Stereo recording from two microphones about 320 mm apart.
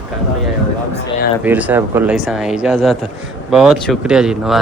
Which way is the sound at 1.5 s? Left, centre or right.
Centre.